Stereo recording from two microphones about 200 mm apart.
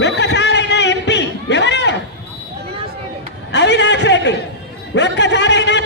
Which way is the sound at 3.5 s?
60° left (ahead or behind).